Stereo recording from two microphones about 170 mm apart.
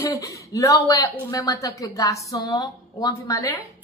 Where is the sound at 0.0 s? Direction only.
20° left (ahead or behind).